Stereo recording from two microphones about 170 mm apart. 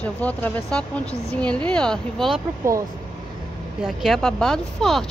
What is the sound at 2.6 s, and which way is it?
Speech, 15° right (ahead or behind).